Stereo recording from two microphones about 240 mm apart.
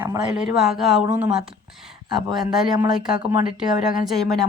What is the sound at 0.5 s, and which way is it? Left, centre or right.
Speech, centre.